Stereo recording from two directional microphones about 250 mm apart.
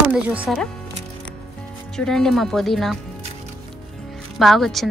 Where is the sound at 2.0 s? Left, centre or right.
Centre.